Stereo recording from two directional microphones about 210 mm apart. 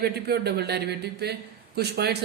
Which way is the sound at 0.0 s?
50° right (ahead or behind).